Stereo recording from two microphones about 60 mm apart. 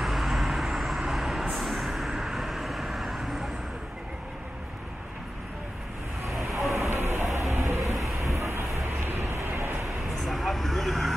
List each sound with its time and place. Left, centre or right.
0.0 s vehicle: centre
6.7 s a sound: right
9.1 s vehicle: right
9.8 s vehicle: centre